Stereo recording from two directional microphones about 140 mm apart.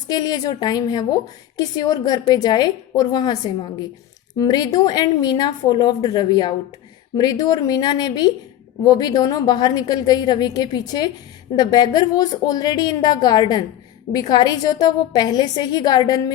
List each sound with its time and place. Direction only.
0.1 s a woman's voice: 30° left (ahead or behind)